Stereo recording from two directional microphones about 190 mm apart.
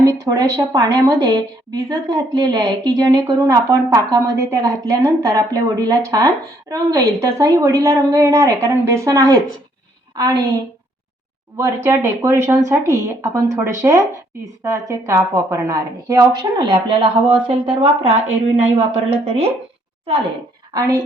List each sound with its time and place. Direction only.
0.0 s speech: 20° right (ahead or behind)
11.5 s speech: 15° right (ahead or behind); by 18.1 s 30° right (ahead or behind)
19.1 s speech: 35° right (ahead or behind)
20.7 s speech: 20° right (ahead or behind)